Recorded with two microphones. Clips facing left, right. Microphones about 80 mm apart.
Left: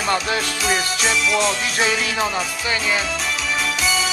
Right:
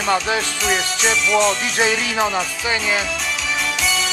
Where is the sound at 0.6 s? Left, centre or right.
Centre.